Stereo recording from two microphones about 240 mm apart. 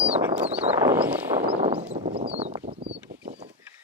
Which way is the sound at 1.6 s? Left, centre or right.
Right.